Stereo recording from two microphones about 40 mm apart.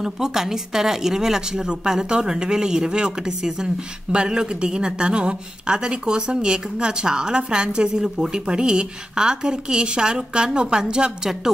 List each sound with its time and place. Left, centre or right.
0.0 s a woman's voice: centre